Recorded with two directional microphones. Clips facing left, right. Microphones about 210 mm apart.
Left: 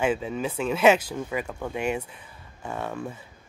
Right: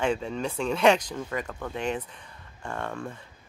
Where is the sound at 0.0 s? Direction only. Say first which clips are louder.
Left 2 dB; 5° left (ahead or behind).